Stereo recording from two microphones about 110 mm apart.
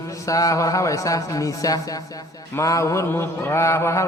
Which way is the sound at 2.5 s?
30° left (ahead or behind).